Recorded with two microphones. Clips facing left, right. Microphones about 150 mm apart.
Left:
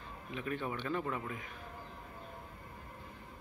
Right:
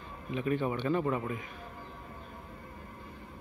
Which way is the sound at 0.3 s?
10° right (ahead or behind).